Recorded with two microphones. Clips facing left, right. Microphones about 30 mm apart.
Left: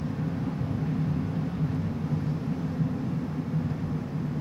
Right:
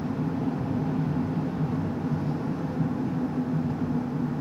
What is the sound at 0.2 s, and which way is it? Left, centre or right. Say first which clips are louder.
Vehicle: right 3 dB; centre.